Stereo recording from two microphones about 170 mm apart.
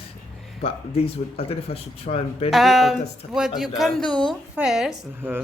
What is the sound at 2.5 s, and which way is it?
A woman's voice, centre (ahead or behind).